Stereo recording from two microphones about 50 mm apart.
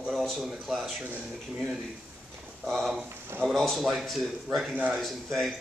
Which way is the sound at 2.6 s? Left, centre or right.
Centre.